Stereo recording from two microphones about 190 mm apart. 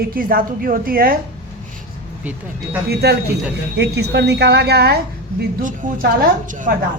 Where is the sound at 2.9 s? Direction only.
60° right (ahead or behind).